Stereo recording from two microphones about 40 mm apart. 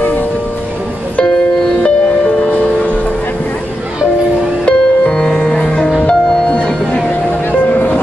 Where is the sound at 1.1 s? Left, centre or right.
Left.